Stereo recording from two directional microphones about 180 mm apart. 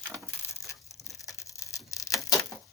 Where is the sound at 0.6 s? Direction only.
15° left (ahead or behind).